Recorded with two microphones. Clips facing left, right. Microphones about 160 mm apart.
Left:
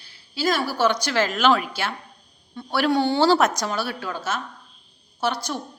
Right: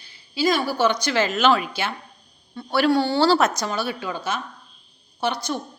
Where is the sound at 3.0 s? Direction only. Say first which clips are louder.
Even; 15° left (ahead or behind).